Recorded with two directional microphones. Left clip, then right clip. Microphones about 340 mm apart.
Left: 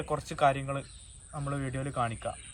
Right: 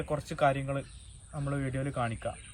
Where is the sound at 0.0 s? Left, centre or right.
Centre.